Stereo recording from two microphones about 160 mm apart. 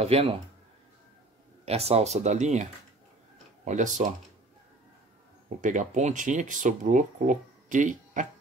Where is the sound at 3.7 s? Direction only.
50° right (ahead or behind).